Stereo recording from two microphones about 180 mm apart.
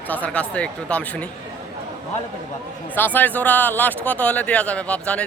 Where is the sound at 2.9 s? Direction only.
10° left (ahead or behind).